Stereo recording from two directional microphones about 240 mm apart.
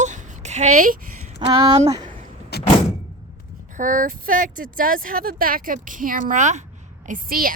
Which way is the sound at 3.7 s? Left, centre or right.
Right.